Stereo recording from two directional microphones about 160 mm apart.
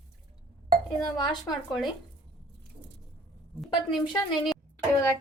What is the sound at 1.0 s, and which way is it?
Speech, 25° left (ahead or behind).